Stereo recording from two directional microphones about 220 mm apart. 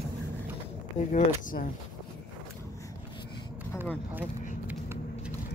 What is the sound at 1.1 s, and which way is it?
Speech, 35° left (ahead or behind).